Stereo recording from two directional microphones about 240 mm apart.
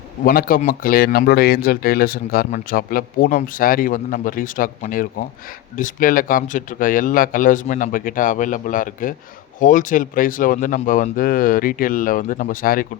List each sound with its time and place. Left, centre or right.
0.3 s speech: left